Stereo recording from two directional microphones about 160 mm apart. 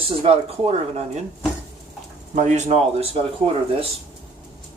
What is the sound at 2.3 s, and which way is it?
Speech, 45° right (ahead or behind).